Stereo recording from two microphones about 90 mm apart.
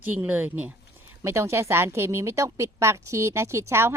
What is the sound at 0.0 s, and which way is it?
Speech, 20° right (ahead or behind).